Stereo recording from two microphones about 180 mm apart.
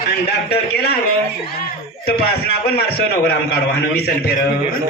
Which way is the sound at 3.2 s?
60° left (ahead or behind).